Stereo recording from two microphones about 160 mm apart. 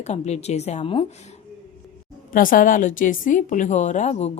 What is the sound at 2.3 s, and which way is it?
Speech, 60° left (ahead or behind).